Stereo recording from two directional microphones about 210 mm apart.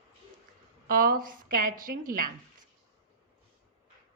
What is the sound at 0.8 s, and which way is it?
Speech, 45° right (ahead or behind).